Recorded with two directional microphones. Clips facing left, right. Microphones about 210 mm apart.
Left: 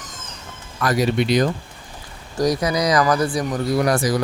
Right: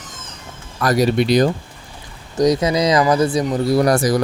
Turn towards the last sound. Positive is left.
turn(degrees=-40)  # may be behind; listen again after turning